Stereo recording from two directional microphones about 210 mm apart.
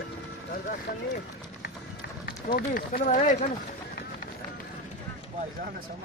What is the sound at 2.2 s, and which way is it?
Speech, 45° left (ahead or behind).